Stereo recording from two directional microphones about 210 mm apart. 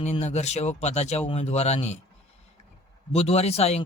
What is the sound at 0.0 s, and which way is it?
Speech, 30° left (ahead or behind).